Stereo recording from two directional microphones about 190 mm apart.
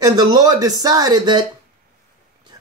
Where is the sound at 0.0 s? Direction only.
20° right (ahead or behind).